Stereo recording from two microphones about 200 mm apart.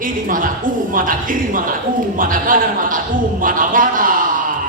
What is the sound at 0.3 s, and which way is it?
Speech, 45° right (ahead or behind).